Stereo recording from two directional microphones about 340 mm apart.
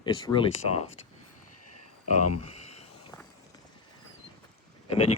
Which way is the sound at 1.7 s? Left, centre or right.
Left.